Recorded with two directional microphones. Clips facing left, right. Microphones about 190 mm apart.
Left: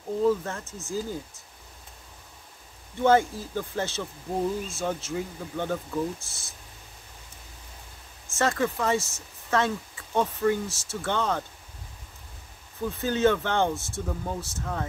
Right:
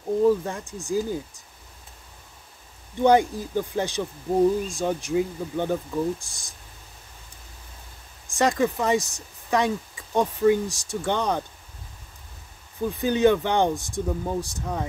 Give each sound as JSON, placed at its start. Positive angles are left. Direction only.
{"t": 0.2, "sound": "speech", "side_deg": -15}
{"t": 3.0, "sound": "speech", "side_deg": -15}
{"t": 8.3, "sound": "speech", "side_deg": -15}
{"t": 12.9, "sound": "speech", "side_deg": -15}